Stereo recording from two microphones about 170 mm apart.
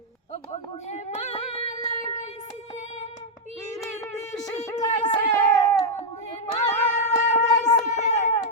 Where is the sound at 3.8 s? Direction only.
20° left (ahead or behind).